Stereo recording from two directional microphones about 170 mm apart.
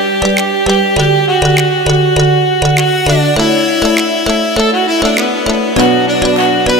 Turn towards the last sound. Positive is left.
turn(degrees=0)  # may be behind; listen again after turning